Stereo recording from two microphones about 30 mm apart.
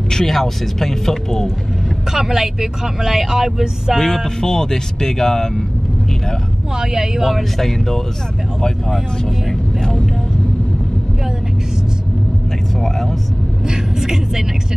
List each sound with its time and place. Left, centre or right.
0.1 s speech: centre
2.1 s speech: centre
4.0 s speech: centre
6.8 s speech: right
7.5 s speech: centre
9.5 s vehicle: centre
13.7 s speech: centre